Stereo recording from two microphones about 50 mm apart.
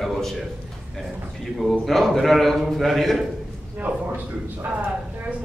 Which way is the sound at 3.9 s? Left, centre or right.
Right.